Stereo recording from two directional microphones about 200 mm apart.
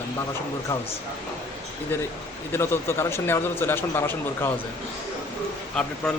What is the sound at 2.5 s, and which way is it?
A man's voice, 10° left (ahead or behind).